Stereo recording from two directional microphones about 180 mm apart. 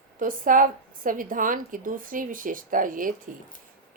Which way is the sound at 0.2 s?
50° right (ahead or behind).